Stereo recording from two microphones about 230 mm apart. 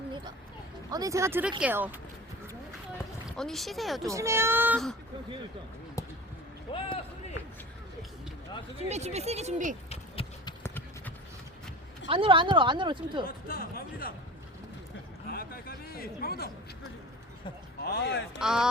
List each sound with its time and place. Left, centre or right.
0.9 s speech: centre
3.3 s speech: centre
4.0 s speech: centre
6.0 s a sound: centre
6.7 s speech: left
8.8 s a woman's voice: right
9.9 s clip-clop: left
10.6 s clip-clop: centre
12.0 s a woman's voice: right
13.2 s speech: left
15.3 s a sound: left
17.7 s speech: left
18.3 s speech: centre